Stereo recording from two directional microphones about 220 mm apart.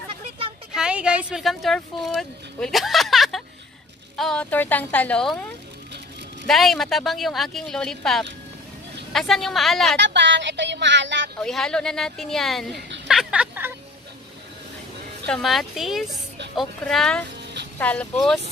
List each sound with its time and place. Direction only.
0.7 s speech: 5° right (ahead or behind)
9.9 s speech: 55° right (ahead or behind)
11.3 s speech: centre (ahead or behind)
13.1 s a sound: 5° right (ahead or behind)
15.2 s speech: centre (ahead or behind)